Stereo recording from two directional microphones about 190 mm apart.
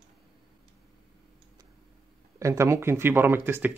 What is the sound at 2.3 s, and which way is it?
Speech, 15° right (ahead or behind).